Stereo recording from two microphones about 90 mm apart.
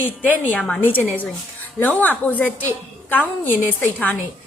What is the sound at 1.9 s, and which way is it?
A woman's voice, 15° left (ahead or behind).